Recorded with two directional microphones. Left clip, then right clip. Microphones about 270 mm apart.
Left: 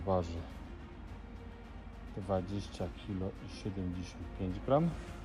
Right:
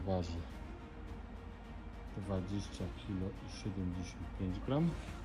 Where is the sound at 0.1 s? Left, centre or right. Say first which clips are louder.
Left 6 dB; centre.